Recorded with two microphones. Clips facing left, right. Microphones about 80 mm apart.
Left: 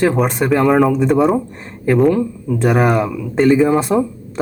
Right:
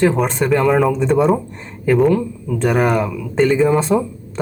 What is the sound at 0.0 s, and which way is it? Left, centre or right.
Speech, centre.